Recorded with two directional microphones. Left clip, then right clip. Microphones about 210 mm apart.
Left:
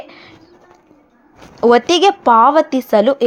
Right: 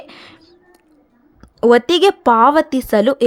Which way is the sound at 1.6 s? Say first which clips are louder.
Left 1 dB; 20° right (ahead or behind).